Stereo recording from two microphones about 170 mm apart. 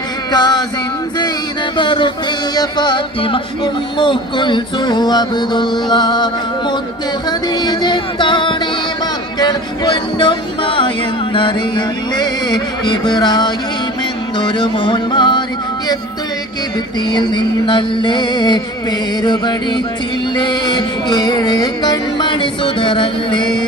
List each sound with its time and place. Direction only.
0.3 s speech: 25° left (ahead or behind)
1.7 s speech: 30° left (ahead or behind)
12.1 s speech: 25° left (ahead or behind)
17.1 s speech: 25° left (ahead or behind)